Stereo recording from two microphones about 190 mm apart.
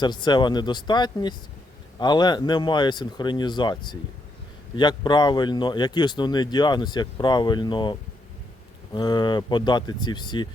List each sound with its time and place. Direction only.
0.0 s speech: 25° left (ahead or behind)